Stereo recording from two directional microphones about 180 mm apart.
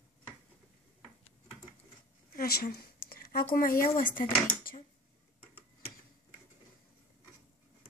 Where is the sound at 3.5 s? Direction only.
55° left (ahead or behind).